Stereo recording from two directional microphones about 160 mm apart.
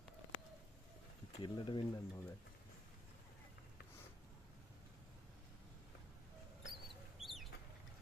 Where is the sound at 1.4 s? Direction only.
30° left (ahead or behind).